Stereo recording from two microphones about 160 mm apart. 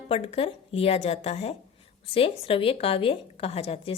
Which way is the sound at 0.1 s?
35° left (ahead or behind).